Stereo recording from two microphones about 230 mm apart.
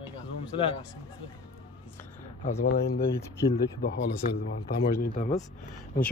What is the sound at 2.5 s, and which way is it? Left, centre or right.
Speech, left.